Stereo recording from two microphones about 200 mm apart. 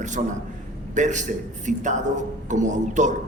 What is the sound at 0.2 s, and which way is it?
A man's voice, 35° right (ahead or behind).